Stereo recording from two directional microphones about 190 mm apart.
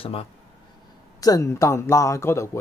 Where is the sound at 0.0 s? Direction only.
30° left (ahead or behind).